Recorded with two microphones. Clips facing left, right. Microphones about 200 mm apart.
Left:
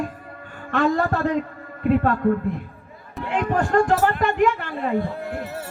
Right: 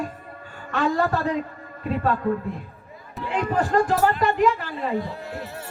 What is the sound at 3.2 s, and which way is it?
Speech, 50° left (ahead or behind).